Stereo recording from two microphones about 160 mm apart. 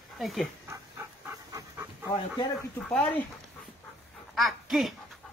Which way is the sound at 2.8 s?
10° left (ahead or behind).